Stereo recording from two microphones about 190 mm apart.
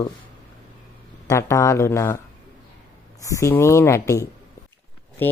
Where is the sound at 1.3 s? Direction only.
15° left (ahead or behind).